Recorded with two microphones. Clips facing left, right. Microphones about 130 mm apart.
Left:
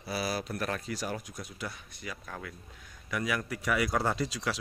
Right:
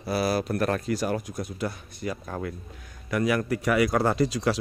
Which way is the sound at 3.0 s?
55° right (ahead or behind).